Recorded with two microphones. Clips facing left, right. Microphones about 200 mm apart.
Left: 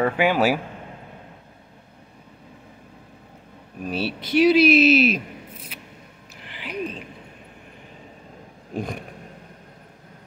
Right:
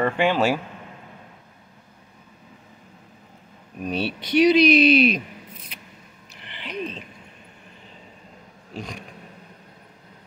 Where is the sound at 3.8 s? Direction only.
5° left (ahead or behind).